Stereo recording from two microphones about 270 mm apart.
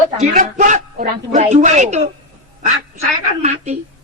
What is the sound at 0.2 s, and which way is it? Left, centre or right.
A woman's voice, right.